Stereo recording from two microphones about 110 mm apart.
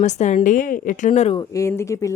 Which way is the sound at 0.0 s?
90° left.